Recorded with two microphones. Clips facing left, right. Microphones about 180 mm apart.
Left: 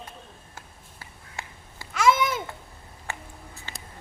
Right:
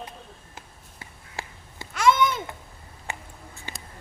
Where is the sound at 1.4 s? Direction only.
30° right (ahead or behind).